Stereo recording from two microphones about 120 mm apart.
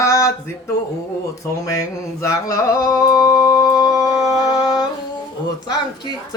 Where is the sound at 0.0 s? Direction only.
25° left (ahead or behind).